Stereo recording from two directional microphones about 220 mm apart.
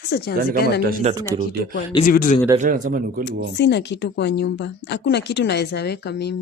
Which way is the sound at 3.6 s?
50° left (ahead or behind).